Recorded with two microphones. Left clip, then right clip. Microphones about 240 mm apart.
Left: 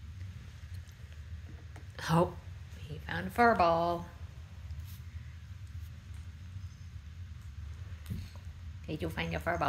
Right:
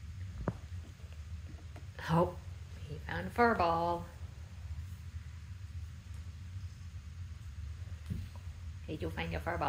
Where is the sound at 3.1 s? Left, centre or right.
Centre.